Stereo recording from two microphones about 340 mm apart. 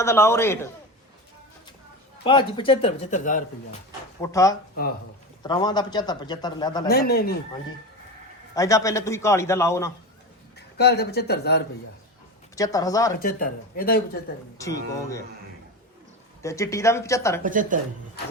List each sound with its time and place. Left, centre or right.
0.0 s speech: centre
2.2 s speech: centre
4.2 s speech: centre
6.8 s speech: left
8.5 s speech: centre
10.8 s speech: left
12.5 s speech: centre
13.1 s speech: left
16.4 s speech: centre
17.4 s speech: right